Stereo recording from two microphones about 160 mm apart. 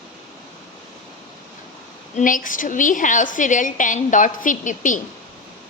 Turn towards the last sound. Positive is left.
turn(degrees=55)  # may be behind; listen again after turning